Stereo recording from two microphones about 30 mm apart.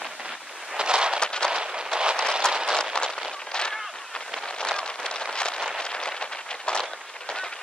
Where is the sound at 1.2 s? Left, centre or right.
Left.